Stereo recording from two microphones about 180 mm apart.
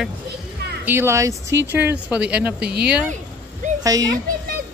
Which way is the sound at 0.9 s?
15° right (ahead or behind).